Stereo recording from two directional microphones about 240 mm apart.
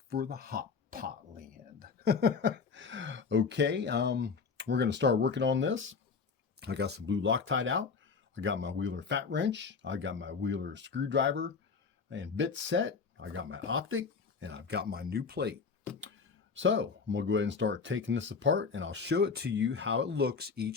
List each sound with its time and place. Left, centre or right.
0.1 s speech: right
16.6 s speech: right